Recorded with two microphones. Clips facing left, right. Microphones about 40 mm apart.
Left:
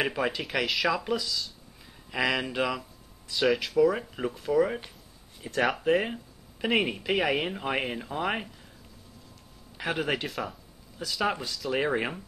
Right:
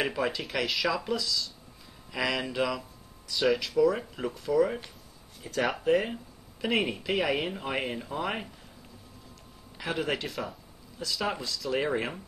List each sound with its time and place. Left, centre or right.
0.0 s speech: centre
5.9 s speech: centre
9.8 s speech: left
10.2 s speech: centre
11.0 s speech: left